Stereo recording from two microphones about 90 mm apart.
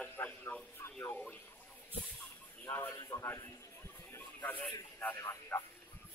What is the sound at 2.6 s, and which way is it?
Speech, 25° left (ahead or behind).